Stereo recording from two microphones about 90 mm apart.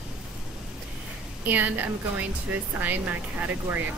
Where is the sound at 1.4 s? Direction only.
20° right (ahead or behind).